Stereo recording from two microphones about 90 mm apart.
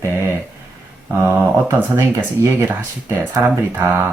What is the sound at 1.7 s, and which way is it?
Speech, 25° right (ahead or behind).